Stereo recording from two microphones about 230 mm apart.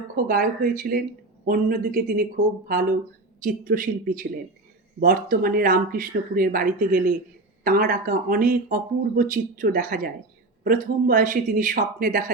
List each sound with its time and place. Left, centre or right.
0.3 s speech: right
3.4 s speech: right